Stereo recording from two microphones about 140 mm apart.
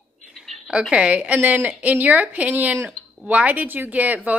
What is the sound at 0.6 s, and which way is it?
A woman's voice, 5° right (ahead or behind).